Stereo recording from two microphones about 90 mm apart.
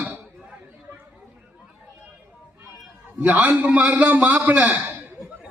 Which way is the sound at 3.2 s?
15° right (ahead or behind).